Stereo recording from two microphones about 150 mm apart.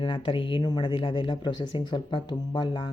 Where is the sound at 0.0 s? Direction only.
35° left (ahead or behind).